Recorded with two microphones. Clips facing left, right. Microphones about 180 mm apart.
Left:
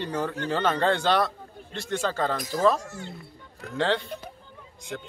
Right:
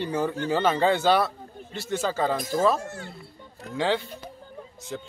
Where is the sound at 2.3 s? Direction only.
25° right (ahead or behind).